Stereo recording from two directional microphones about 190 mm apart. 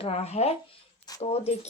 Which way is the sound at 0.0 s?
35° left (ahead or behind).